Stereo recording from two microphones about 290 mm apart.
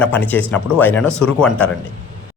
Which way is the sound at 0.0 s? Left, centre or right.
Centre.